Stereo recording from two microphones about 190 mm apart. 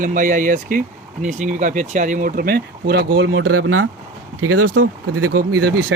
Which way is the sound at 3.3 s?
90° right.